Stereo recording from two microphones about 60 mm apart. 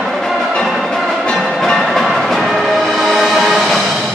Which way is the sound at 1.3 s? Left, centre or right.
Centre.